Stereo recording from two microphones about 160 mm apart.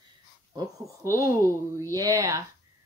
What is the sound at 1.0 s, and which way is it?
Speech, 20° right (ahead or behind).